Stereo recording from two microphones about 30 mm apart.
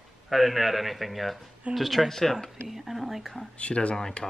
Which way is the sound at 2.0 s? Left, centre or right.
Centre.